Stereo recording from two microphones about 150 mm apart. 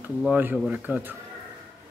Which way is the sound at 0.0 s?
10° right (ahead or behind).